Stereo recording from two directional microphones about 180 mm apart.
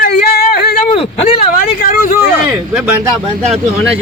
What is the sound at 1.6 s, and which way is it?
Speech, 50° left (ahead or behind).